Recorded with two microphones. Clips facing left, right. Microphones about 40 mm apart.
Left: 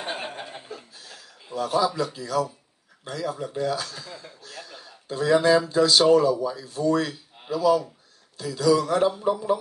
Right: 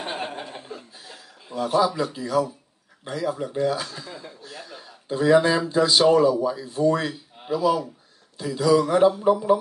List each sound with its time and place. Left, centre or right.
0.0 s chuckle: centre
1.0 s chuckle: centre
2.0 s speech: centre